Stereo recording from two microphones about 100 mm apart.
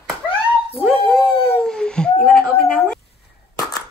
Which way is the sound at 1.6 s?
5° left (ahead or behind).